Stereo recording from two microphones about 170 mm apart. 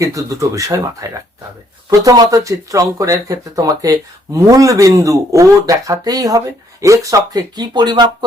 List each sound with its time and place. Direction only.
0.0 s speech: 20° right (ahead or behind)